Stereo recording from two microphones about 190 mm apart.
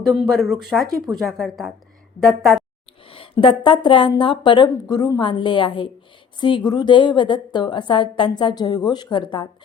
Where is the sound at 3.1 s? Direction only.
30° left (ahead or behind).